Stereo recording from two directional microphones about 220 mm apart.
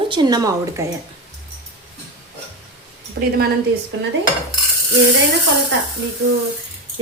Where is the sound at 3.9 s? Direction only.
60° right (ahead or behind).